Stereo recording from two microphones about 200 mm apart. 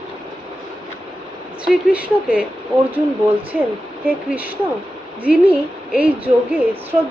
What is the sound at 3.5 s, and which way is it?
A woman's voice, 10° right (ahead or behind).